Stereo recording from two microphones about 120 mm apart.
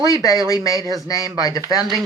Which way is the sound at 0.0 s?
30° left (ahead or behind).